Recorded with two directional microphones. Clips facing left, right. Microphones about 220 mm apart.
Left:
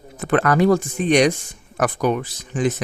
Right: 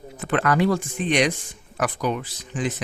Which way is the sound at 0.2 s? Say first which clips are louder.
Left 4 dB; 45° left (ahead or behind).